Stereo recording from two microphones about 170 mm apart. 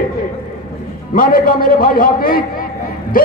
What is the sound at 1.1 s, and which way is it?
A man's voice, 55° left (ahead or behind).